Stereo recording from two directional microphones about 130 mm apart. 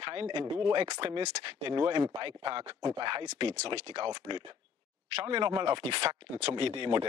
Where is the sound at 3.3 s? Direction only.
50° right (ahead or behind).